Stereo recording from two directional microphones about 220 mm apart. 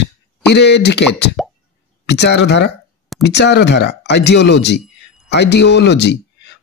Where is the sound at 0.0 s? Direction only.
50° left (ahead or behind).